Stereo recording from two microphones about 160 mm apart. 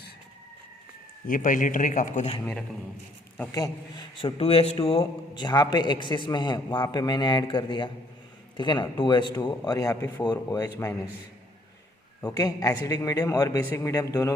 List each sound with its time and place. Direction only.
1.3 s a man's voice: 55° left (ahead or behind)
2.4 s a man's voice: 10° left (ahead or behind)
3.6 s a man's voice: 30° left (ahead or behind)
12.2 s a man's voice: 20° left (ahead or behind)